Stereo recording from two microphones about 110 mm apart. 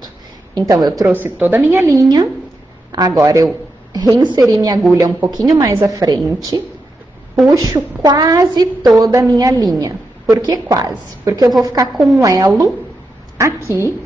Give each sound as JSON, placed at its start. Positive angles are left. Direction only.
{"t": 0.6, "sound": "a woman's voice", "side_deg": -35}
{"t": 1.1, "sound": "a woman's voice", "side_deg": -15}
{"t": 11.9, "sound": "speech", "side_deg": 0}
{"t": 12.2, "sound": "a woman's voice", "side_deg": -30}